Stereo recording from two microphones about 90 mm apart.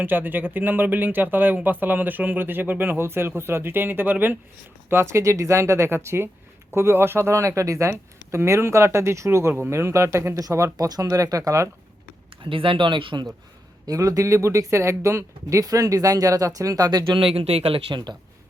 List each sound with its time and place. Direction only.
0.0 s speech: 20° right (ahead or behind); by 11.7 s 35° right (ahead or behind)
12.5 s speech: 75° right (ahead or behind)
13.8 s speech: 40° right (ahead or behind)
17.2 s speech: 90° right